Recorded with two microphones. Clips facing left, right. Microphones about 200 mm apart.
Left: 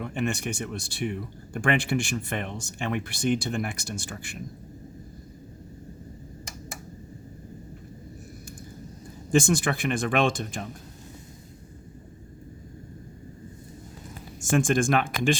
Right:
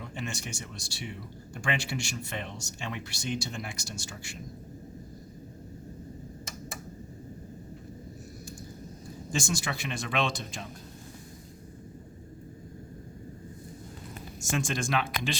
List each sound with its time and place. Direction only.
0.0 s speech: 60° left (ahead or behind)
9.3 s speech: 55° left (ahead or behind)
14.4 s speech: 50° left (ahead or behind)